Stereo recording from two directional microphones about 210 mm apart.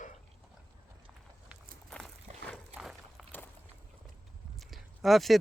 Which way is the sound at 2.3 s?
30° right (ahead or behind).